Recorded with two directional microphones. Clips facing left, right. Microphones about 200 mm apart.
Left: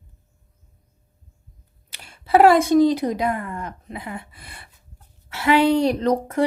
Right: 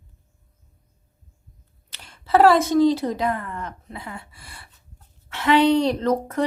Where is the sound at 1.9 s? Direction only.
10° left (ahead or behind).